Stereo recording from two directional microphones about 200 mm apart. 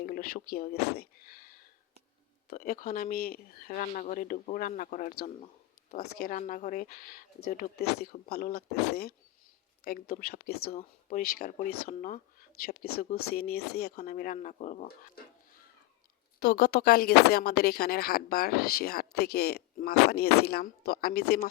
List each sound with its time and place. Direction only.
0.0 s speech: 45° left (ahead or behind)
6.1 s speech: 45° left (ahead or behind)